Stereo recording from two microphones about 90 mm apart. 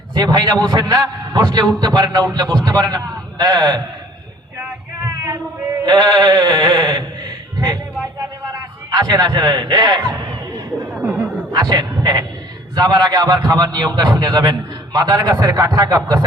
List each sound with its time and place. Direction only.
0.1 s a man's voice: 50° right (ahead or behind)
5.8 s a man's voice: 55° right (ahead or behind)
8.5 s a sound: 50° right (ahead or behind)
11.5 s a man's voice: 50° right (ahead or behind)